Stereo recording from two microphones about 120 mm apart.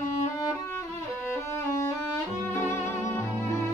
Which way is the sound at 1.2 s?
20° left (ahead or behind).